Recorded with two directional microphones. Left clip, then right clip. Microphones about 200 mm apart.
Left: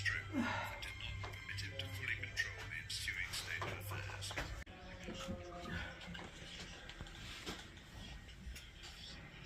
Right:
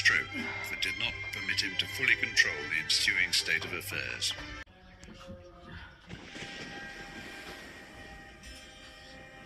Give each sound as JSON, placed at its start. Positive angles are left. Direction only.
{"t": 0.0, "sound": "speech", "side_deg": -50}